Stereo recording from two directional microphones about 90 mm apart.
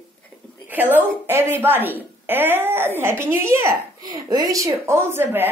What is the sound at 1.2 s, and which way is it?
A woman's voice, 25° right (ahead or behind).